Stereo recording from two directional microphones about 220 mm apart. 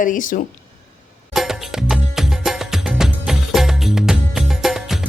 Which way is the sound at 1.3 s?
Centre (ahead or behind).